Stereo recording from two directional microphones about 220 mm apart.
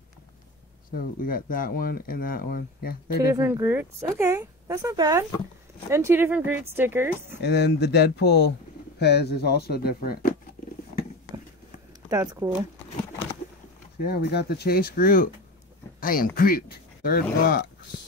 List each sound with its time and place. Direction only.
0.9 s speech: 40° left (ahead or behind)
3.3 s speech: 10° right (ahead or behind)
7.4 s speech: 50° left (ahead or behind)
12.1 s speech: 15° right (ahead or behind)
14.0 s speech: 45° left (ahead or behind)